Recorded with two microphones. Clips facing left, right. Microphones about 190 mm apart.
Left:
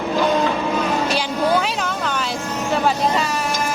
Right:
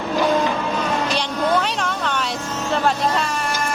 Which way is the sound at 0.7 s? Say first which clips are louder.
Left 2 dB; 5° left (ahead or behind).